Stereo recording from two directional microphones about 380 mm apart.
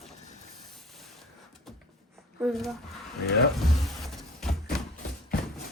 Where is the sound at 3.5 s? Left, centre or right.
Centre.